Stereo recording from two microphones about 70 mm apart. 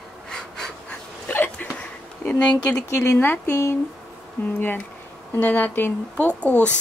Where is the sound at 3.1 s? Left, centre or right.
Left.